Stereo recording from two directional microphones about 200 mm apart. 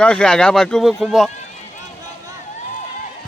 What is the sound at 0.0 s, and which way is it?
Speech, 5° left (ahead or behind).